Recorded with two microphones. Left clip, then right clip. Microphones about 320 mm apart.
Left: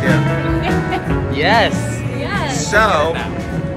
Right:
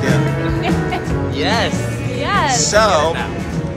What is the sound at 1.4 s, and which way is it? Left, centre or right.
Music, left.